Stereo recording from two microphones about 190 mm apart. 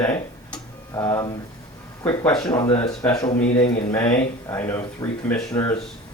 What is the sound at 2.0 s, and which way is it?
Speech, 20° left (ahead or behind).